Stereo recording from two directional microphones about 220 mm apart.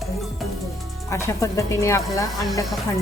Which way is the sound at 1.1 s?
15° left (ahead or behind).